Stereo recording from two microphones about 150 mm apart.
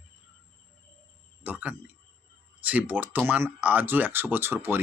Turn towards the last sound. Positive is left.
turn(degrees=-15)  # may be behind; listen again after turning